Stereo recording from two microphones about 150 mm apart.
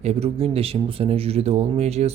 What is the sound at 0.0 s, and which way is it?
Speech, 45° right (ahead or behind).